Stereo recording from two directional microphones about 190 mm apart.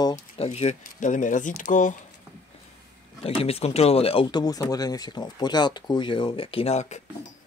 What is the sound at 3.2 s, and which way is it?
Speech, 30° left (ahead or behind).